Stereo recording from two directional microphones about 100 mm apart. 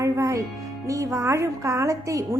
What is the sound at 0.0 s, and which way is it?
Music, 30° right (ahead or behind).